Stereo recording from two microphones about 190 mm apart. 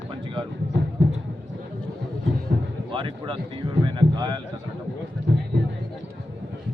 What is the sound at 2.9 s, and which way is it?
Speech, 25° right (ahead or behind).